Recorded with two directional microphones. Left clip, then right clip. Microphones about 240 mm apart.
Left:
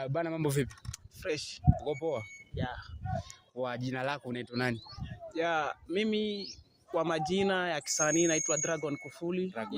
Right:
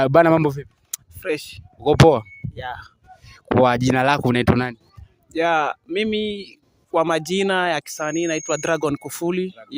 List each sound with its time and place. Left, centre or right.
0.0 s a man's voice: right